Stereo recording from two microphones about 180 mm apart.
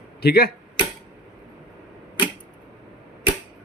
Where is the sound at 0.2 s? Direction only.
60° left (ahead or behind).